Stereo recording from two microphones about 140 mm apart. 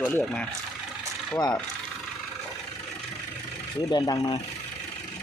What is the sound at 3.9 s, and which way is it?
Speech, 25° left (ahead or behind).